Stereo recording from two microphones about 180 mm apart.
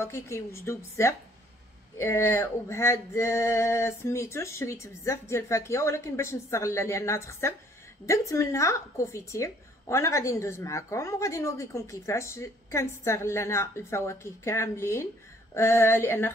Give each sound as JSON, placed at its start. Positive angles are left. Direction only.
{"t": 0.0, "sound": "a woman's voice", "side_deg": 15}